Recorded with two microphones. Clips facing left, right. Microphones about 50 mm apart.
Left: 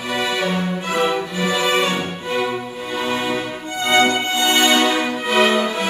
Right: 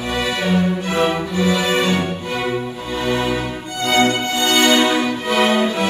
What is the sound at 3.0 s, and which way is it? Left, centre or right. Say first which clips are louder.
Music: right 2 dB; centre.